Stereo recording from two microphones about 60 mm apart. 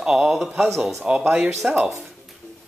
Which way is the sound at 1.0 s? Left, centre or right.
Centre.